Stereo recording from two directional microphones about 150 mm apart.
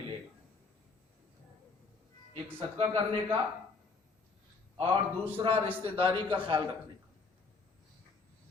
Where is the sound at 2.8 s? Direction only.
35° right (ahead or behind).